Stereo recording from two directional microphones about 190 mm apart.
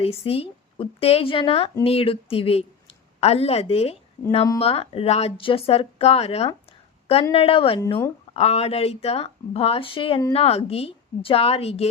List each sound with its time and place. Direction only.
0.0 s a woman's voice: 30° left (ahead or behind)
6.7 s a sound: 30° left (ahead or behind)
7.3 s a woman's voice: 30° left (ahead or behind)